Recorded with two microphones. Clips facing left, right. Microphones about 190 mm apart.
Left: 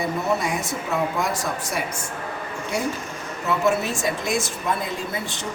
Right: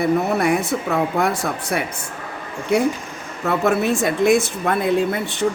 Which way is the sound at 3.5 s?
60° right (ahead or behind).